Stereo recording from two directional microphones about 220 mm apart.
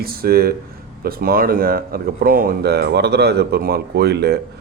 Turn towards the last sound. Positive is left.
turn(degrees=-45)  # may be behind; listen again after turning